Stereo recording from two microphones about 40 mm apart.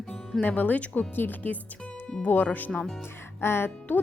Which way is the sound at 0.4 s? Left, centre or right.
Left.